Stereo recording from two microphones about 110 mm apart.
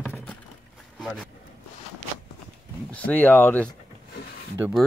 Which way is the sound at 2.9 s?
15° left (ahead or behind).